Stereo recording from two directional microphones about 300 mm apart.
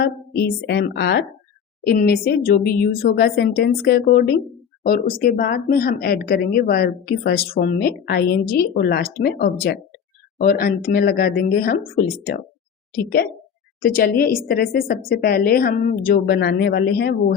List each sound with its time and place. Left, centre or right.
0.0 s a woman's voice: left
13.8 s a woman's voice: left